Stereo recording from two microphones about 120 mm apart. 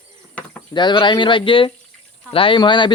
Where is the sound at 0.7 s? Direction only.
40° left (ahead or behind).